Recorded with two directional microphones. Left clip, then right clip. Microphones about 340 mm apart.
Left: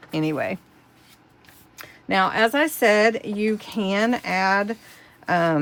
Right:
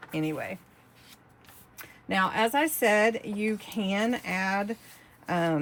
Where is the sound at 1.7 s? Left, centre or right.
Left.